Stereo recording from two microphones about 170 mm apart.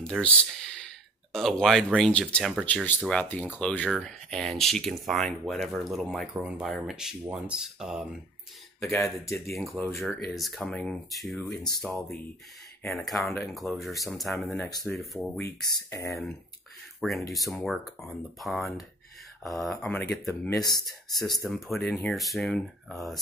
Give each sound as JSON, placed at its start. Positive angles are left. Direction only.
{"t": 0.0, "sound": "speech", "side_deg": 5}
{"t": 11.4, "sound": "speech", "side_deg": 20}
{"t": 12.8, "sound": "speech", "side_deg": 0}
{"t": 15.3, "sound": "speech", "side_deg": 15}
{"t": 17.0, "sound": "speech", "side_deg": 0}
{"t": 21.5, "sound": "speech", "side_deg": 0}